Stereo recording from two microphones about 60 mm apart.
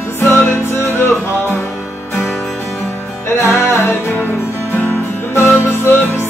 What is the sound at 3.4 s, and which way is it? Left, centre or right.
Music, left.